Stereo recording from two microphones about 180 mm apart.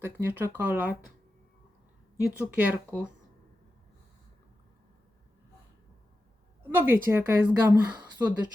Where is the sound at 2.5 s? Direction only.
5° right (ahead or behind).